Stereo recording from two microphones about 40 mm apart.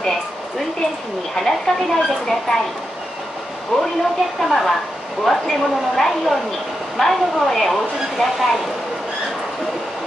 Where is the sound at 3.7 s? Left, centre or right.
Centre.